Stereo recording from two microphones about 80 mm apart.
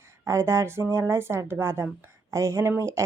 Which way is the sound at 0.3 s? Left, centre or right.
Right.